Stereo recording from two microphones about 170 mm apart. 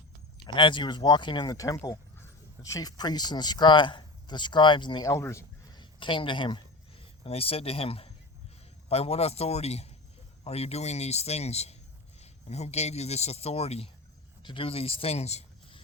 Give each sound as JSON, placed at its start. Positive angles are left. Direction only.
{"t": 0.4, "sound": "speech", "side_deg": 30}